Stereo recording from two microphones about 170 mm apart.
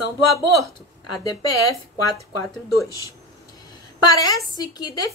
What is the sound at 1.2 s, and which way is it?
Speech, 20° left (ahead or behind).